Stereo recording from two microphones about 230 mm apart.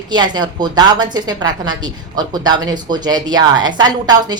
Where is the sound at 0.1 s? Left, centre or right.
Centre.